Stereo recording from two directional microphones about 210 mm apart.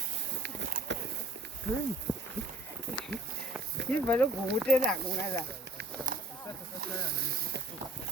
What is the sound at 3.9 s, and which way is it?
Speech, 10° left (ahead or behind).